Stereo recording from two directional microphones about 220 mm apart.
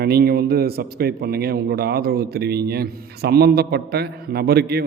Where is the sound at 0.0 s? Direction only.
45° right (ahead or behind).